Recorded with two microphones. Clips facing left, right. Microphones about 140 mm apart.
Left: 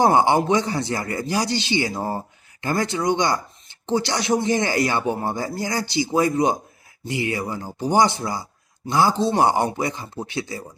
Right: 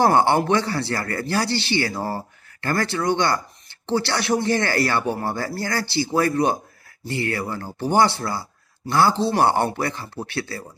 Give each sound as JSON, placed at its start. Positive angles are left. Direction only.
{"t": 0.0, "sound": "speech", "side_deg": 15}